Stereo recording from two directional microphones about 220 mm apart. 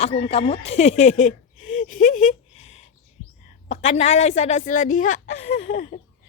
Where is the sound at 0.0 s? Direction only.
25° left (ahead or behind).